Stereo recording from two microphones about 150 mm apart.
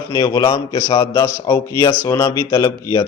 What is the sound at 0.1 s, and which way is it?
A man's voice, 25° left (ahead or behind).